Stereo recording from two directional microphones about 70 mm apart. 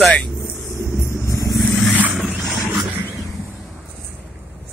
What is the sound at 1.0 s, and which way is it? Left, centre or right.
Vehicle, left.